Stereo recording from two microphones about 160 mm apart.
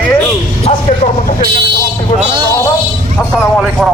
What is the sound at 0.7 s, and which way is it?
Speech, 40° left (ahead or behind).